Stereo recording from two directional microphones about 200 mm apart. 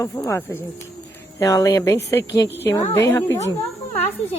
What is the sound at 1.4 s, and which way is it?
A woman's voice, 15° left (ahead or behind).